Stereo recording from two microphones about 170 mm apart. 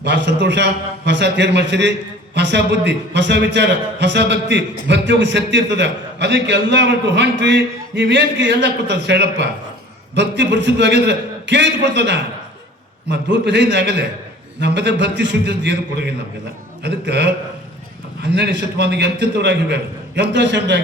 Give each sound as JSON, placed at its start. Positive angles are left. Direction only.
{"t": 0.0, "sound": "a man's voice", "side_deg": -90}